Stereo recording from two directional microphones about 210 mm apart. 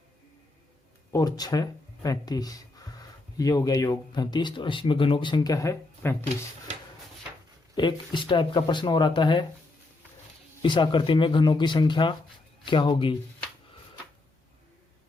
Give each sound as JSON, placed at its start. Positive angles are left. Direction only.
{"t": 1.1, "sound": "speech", "side_deg": 20}
{"t": 7.8, "sound": "speech", "side_deg": 20}
{"t": 10.6, "sound": "speech", "side_deg": 20}